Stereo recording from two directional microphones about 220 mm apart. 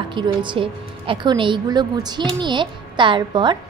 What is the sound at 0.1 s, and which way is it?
A woman's voice, 20° right (ahead or behind).